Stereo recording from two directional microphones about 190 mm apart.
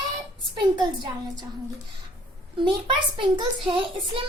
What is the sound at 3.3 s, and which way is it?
Speech, 25° right (ahead or behind).